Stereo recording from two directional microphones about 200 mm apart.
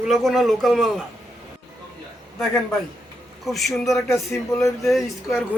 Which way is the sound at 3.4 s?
Centre (ahead or behind).